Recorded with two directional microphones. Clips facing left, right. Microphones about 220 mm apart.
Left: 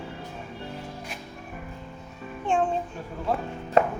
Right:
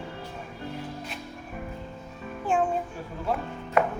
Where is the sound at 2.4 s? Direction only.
5° right (ahead or behind).